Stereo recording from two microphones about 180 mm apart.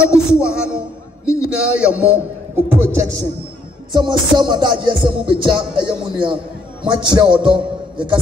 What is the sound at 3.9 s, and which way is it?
Music, 25° right (ahead or behind).